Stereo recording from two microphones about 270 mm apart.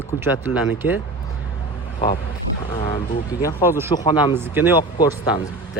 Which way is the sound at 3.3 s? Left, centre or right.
Centre.